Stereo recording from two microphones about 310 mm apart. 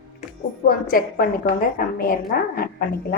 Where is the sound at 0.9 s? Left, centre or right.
Left.